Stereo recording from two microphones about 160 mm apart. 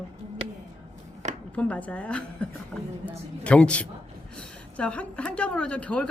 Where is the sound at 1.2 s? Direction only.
45° right (ahead or behind).